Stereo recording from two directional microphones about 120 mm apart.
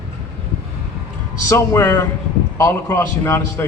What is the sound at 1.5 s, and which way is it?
A man's voice, 20° left (ahead or behind).